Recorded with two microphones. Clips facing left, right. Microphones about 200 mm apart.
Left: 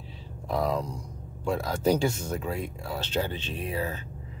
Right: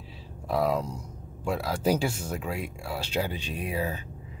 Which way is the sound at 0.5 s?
5° right (ahead or behind).